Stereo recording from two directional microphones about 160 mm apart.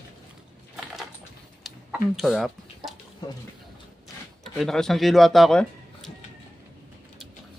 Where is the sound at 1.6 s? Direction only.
Centre (ahead or behind).